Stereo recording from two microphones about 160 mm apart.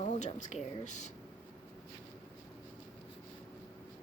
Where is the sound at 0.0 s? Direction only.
50° left (ahead or behind).